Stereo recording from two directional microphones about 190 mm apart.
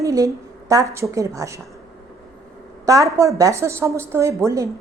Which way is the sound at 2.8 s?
15° right (ahead or behind).